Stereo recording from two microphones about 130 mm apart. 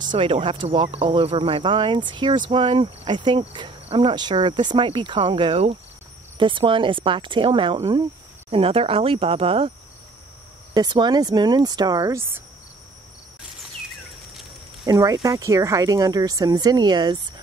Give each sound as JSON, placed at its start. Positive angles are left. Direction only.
{"t": 0.0, "sound": "speech", "side_deg": -40}
{"t": 6.3, "sound": "speech", "side_deg": -40}
{"t": 10.7, "sound": "speech", "side_deg": -35}
{"t": 14.9, "sound": "speech", "side_deg": -30}